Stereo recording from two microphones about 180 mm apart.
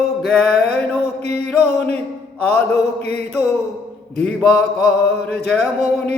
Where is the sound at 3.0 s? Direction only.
60° left (ahead or behind).